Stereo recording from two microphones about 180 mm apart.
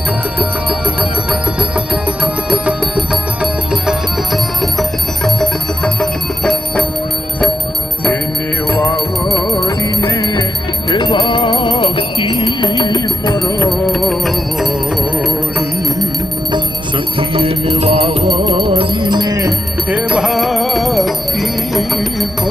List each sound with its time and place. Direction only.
0.3 s music: 5° right (ahead or behind)
8.7 s music: 15° left (ahead or behind)
13.7 s music: 5° left (ahead or behind)
17.2 s music: 30° right (ahead or behind); by 22.3 s centre (ahead or behind)